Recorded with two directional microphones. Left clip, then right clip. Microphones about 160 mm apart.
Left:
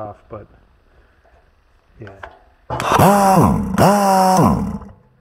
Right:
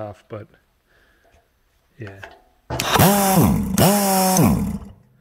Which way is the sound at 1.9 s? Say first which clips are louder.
Left 2 dB; 60° right (ahead or behind).